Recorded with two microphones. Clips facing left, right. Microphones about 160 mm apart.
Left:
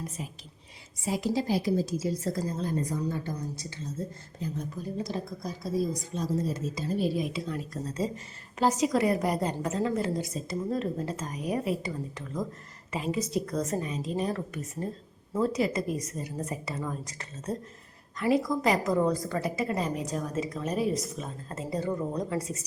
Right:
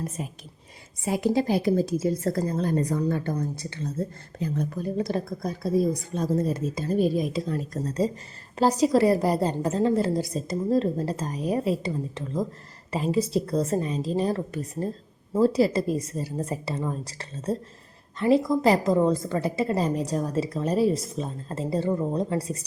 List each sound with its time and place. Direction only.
0.2 s a woman's voice: 50° right (ahead or behind); by 22.6 s 35° right (ahead or behind)